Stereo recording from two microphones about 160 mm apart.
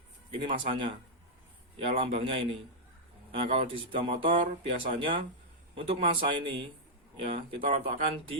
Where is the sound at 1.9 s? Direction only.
35° right (ahead or behind).